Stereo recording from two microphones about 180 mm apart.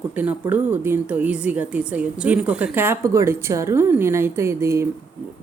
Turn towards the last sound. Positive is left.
turn(degrees=-15)  # may be behind; listen again after turning